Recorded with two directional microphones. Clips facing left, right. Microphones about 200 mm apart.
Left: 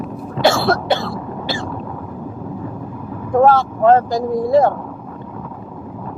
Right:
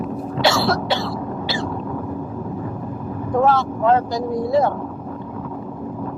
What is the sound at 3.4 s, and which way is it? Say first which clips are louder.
Speech: left 5 dB; 50° left (ahead or behind).